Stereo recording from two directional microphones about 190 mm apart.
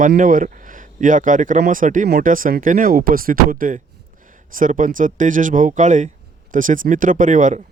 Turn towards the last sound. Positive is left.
turn(degrees=-40)  # may be behind; listen again after turning